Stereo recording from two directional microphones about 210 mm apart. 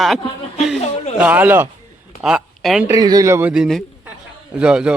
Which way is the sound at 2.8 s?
15° right (ahead or behind).